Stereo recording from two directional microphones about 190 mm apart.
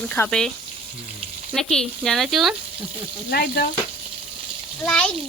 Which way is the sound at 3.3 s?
55° left (ahead or behind).